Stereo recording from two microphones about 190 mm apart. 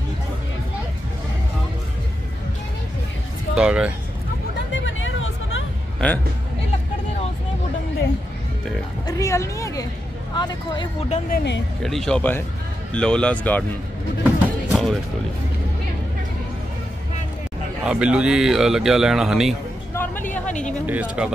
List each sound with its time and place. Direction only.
3.5 s speech: 5° right (ahead or behind)
4.7 s hubbub: 90° left
5.9 s speech: 10° left (ahead or behind)
9.0 s a woman's voice: 15° left (ahead or behind)
11.1 s speech: 50° left (ahead or behind)
11.8 s a woman's voice: centre (ahead or behind)
14.7 s music: centre (ahead or behind)
17.8 s speech: 5° right (ahead or behind)
19.9 s a sound: 10° left (ahead or behind)
20.8 s speech: 5° right (ahead or behind)